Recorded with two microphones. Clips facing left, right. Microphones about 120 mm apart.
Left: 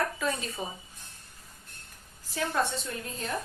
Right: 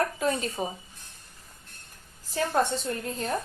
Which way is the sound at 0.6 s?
40° right (ahead or behind).